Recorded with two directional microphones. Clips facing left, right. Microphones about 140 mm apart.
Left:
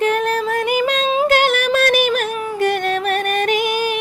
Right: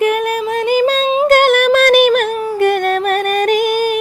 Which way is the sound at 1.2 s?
50° right (ahead or behind).